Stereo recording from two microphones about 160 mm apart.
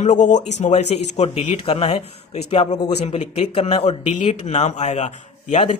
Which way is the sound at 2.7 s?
25° left (ahead or behind).